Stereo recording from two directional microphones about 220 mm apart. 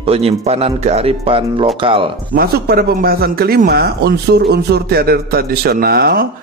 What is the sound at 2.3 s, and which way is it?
A man's voice, 45° right (ahead or behind).